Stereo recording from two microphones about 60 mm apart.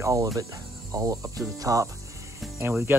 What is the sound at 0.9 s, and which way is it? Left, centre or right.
Cricket, right.